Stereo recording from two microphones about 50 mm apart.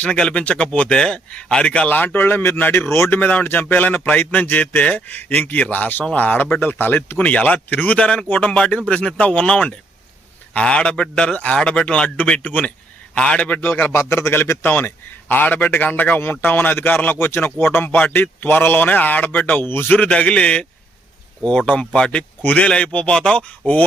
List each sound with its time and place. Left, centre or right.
0.0 s speech: centre
2.1 s a man's voice: left
13.1 s speech: centre
13.6 s speech: left
13.9 s a man's voice: left
14.6 s a man's voice: left
20.0 s speech: left
21.7 s speech: left